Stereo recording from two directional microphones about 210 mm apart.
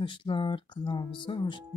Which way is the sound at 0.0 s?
25° left (ahead or behind).